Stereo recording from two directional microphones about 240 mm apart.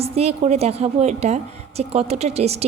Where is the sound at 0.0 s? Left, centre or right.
Right.